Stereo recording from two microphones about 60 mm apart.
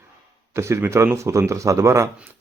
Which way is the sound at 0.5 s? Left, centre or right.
Right.